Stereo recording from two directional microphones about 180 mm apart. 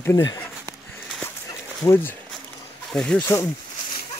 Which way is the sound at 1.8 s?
15° left (ahead or behind).